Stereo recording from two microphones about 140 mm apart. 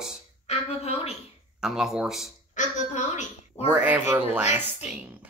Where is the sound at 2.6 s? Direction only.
60° left (ahead or behind).